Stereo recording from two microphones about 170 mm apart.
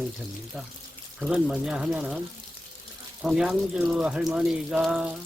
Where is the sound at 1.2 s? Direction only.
5° right (ahead or behind).